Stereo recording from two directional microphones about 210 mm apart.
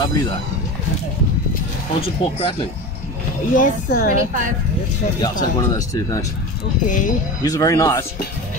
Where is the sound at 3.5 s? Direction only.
40° left (ahead or behind).